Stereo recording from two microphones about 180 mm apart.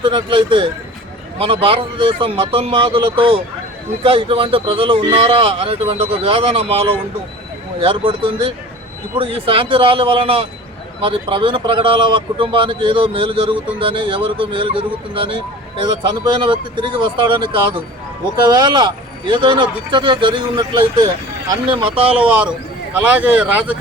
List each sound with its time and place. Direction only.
0.0 s a man's voice: 25° right (ahead or behind)
22.2 s speech: 5° right (ahead or behind)